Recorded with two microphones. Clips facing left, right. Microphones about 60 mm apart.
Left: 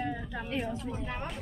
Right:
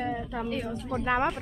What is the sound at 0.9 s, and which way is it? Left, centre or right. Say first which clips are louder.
Speech: right 11 dB; right.